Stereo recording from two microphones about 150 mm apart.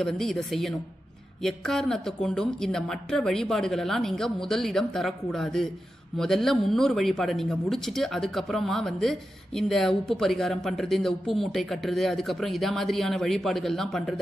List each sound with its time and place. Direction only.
0.0 s speech: 5° left (ahead or behind)